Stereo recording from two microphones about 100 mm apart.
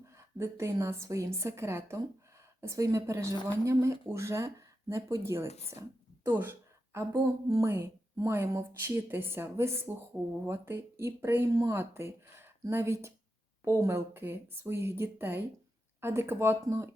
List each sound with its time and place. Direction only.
0.0 s a woman's voice: 30° right (ahead or behind)
11.5 s a woman's voice: 35° right (ahead or behind)